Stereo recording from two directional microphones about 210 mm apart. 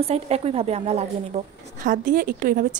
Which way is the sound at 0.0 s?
30° right (ahead or behind).